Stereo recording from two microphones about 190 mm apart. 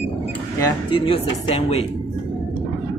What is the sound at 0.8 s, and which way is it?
Speech, 30° left (ahead or behind).